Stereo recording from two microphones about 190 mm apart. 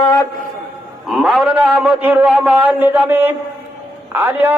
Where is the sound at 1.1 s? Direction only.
Centre (ahead or behind).